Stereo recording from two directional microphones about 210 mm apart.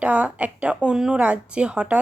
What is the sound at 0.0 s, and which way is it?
A woman's voice, 5° right (ahead or behind).